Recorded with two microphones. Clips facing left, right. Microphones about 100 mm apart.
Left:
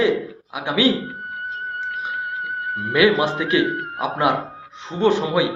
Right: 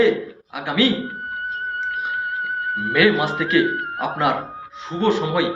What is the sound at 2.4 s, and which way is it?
Music, 45° right (ahead or behind).